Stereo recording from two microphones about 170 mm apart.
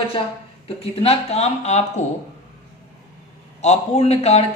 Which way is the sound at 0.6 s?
35° left (ahead or behind).